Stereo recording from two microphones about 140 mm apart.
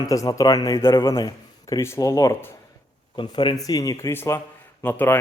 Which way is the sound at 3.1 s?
30° left (ahead or behind).